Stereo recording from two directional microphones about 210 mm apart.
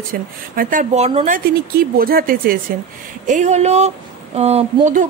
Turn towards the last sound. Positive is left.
turn(degrees=-30)  # may be behind; listen again after turning